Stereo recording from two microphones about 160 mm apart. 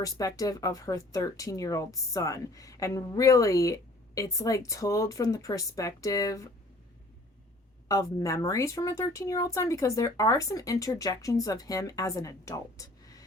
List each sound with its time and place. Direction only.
0.0 s speech: 20° left (ahead or behind)
7.9 s speech: 20° left (ahead or behind)